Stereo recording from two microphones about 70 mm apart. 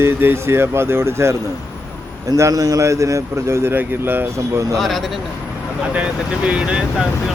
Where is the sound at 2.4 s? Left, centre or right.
Right.